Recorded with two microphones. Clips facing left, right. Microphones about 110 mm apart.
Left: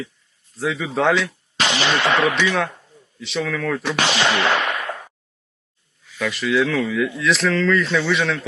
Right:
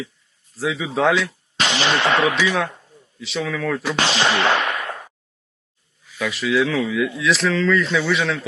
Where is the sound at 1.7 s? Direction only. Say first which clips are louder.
Even; 25° right (ahead or behind).